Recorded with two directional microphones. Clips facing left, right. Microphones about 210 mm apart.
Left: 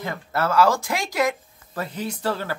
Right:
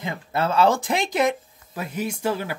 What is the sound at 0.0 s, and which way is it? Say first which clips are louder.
Speech: even; 20° right (ahead or behind).